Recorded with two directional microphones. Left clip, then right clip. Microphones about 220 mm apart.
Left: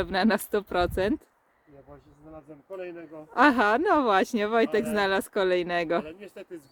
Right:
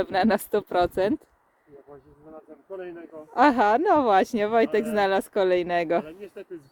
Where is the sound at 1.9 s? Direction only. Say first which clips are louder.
Right 1 dB; 55° left (ahead or behind).